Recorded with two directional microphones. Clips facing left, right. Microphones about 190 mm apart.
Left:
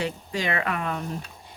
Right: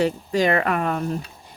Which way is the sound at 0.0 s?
40° right (ahead or behind).